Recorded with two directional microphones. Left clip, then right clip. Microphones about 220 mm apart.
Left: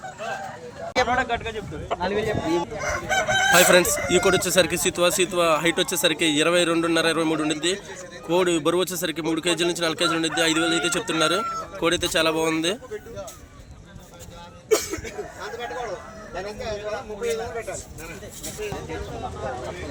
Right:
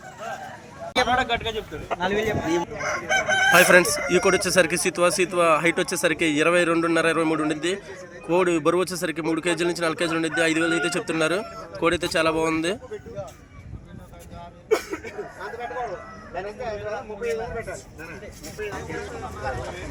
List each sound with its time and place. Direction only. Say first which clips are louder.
1.0 s speech: right 3 dB; 15° right (ahead or behind)
2.0 s a man's voice: right 1 dB; 40° right (ahead or behind)
2.5 s a man's voice: even; 20° right (ahead or behind)
3.5 s speech: right 1 dB; centre (ahead or behind)
14.7 s a sound: left 1 dB; 30° right (ahead or behind)
16.3 s a man's voice: even; 30° right (ahead or behind)